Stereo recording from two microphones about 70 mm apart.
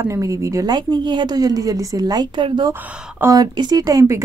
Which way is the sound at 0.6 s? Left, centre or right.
Right.